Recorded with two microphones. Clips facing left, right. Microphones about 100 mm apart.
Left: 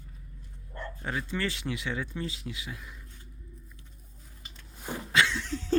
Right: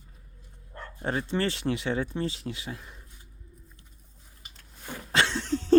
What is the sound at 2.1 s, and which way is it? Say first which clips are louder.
Speech: right 5 dB; 30° right (ahead or behind).